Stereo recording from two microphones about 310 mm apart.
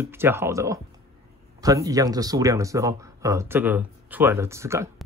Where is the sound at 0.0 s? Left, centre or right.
Centre.